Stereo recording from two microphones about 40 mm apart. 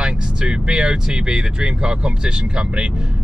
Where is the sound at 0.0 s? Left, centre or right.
Right.